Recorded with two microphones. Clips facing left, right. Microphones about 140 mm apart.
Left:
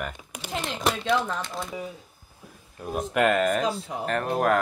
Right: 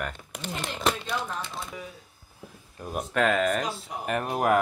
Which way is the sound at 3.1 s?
5° left (ahead or behind).